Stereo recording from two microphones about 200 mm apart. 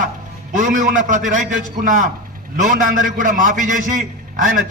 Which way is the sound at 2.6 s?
40° right (ahead or behind).